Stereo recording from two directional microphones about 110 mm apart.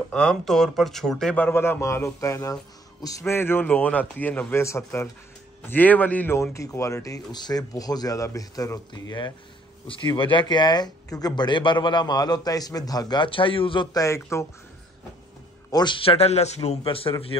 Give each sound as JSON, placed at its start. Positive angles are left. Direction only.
{"t": 0.1, "sound": "a man's voice", "side_deg": 5}
{"t": 6.5, "sound": "speech", "side_deg": 30}
{"t": 9.8, "sound": "speech", "side_deg": 50}
{"t": 13.9, "sound": "a man's voice", "side_deg": 30}
{"t": 15.7, "sound": "speech", "side_deg": 45}
{"t": 16.8, "sound": "speech", "side_deg": 55}